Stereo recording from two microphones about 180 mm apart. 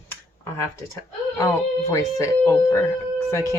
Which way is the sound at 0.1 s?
15° left (ahead or behind).